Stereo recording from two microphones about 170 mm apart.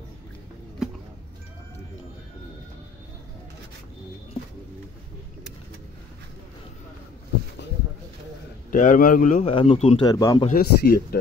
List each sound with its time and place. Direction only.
8.6 s a man's voice: 50° left (ahead or behind)
9.5 s speech: 30° left (ahead or behind)
10.0 s speech: 20° left (ahead or behind)
10.5 s speech: 60° left (ahead or behind)